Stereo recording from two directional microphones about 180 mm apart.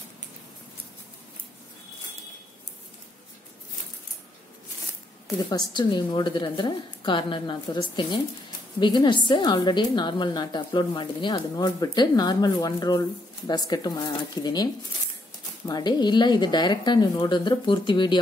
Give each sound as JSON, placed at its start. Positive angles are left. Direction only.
{"t": 5.5, "sound": "a woman's voice", "side_deg": 25}